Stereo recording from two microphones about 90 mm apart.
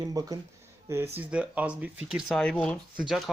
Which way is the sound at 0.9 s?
30° right (ahead or behind).